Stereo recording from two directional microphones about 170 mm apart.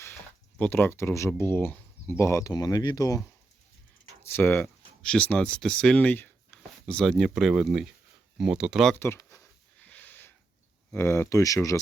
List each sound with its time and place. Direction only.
0.6 s speech: 10° left (ahead or behind)
4.3 s speech: 10° left (ahead or behind)
9.0 s speech: 15° left (ahead or behind)
9.8 s a sound: 10° left (ahead or behind)
10.9 s speech: 15° left (ahead or behind)